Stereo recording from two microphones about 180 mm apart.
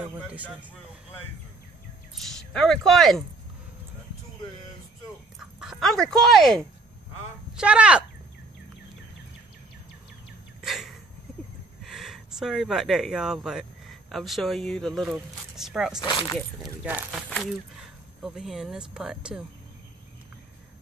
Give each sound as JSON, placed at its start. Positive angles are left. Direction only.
{"t": 0.1, "sound": "speech", "side_deg": -10}
{"t": 2.1, "sound": "speech", "side_deg": 5}
{"t": 5.4, "sound": "speech", "side_deg": 0}
{"t": 10.6, "sound": "a sound", "side_deg": 0}
{"t": 11.8, "sound": "speech", "side_deg": 0}
{"t": 16.0, "sound": "speech", "side_deg": 25}
{"t": 16.8, "sound": "speech", "side_deg": -10}
{"t": 18.2, "sound": "speech", "side_deg": 0}